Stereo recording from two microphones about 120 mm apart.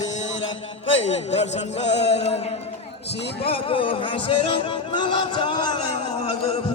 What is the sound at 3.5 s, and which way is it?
Music, 50° left (ahead or behind).